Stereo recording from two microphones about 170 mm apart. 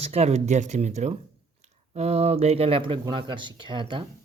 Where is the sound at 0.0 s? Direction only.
40° right (ahead or behind).